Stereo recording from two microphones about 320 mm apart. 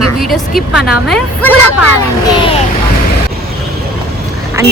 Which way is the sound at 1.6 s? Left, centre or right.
Left.